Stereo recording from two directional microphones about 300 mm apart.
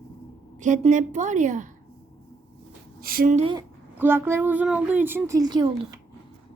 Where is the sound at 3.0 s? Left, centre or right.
Right.